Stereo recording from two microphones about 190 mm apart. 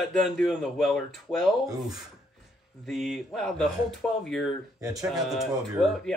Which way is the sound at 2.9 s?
Centre (ahead or behind).